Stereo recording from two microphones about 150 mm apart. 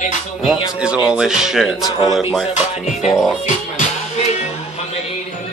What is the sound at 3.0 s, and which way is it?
Speech, centre (ahead or behind).